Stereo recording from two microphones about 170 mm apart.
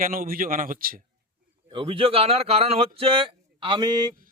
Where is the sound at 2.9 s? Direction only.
35° right (ahead or behind).